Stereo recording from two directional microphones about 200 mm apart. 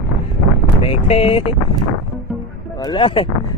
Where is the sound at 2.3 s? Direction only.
Centre (ahead or behind).